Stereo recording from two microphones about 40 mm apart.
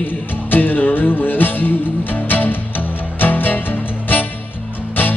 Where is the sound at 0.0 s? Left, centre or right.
Left.